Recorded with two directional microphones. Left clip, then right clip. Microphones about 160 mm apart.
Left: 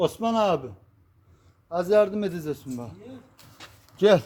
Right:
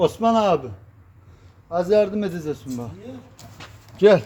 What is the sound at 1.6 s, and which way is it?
A man's voice, 45° left (ahead or behind).